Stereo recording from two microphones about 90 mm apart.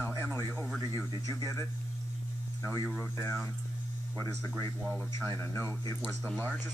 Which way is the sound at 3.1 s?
30° left (ahead or behind).